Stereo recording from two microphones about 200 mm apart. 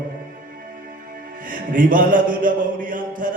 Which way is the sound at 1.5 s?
40° right (ahead or behind).